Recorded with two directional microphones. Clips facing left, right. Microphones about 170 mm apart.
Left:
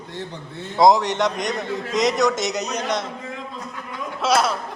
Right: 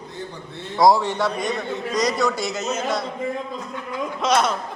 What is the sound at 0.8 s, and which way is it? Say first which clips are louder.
Speech: left 1 dB; 20° left (ahead or behind).